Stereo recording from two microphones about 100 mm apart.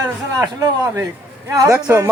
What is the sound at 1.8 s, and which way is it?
Speech, 20° right (ahead or behind).